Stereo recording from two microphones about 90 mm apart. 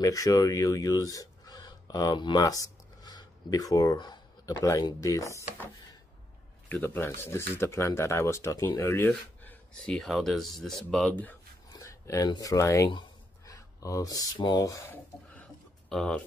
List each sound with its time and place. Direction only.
0.0 s speech: 40° left (ahead or behind); by 2.4 s 55° left (ahead or behind)
2.4 s a sound: 40° left (ahead or behind)
4.5 s speech: 40° left (ahead or behind)
6.7 s speech: 25° left (ahead or behind)
9.8 s speech: 5° left (ahead or behind)
11.7 s a sound: 35° left (ahead or behind)
12.4 s speech: 40° left (ahead or behind)
15.9 s speech: 5° left (ahead or behind)